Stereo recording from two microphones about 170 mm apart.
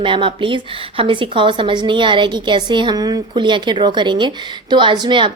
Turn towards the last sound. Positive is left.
turn(degrees=-30)  # may be behind; listen again after turning